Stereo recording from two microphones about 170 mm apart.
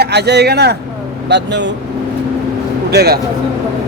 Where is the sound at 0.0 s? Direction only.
75° right (ahead or behind).